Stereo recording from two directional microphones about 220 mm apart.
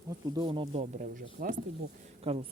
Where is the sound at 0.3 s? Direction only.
20° right (ahead or behind); by 1.6 s 35° right (ahead or behind).